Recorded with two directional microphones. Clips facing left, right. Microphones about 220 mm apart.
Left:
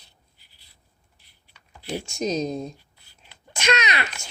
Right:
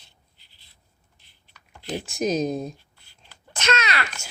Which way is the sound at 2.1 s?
5° right (ahead or behind).